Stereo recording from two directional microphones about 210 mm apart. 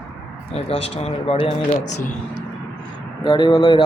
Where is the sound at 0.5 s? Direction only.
30° left (ahead or behind).